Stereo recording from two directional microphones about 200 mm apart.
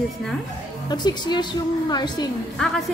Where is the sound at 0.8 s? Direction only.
20° left (ahead or behind).